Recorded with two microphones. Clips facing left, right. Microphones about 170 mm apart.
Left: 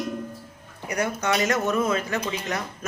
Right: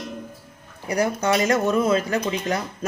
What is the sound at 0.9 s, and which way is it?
A woman's voice, 35° right (ahead or behind).